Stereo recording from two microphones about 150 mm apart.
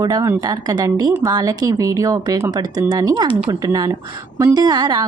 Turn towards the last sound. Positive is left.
turn(degrees=-25)  # may be behind; listen again after turning